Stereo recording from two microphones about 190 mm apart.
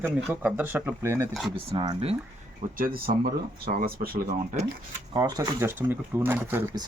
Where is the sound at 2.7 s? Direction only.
45° right (ahead or behind).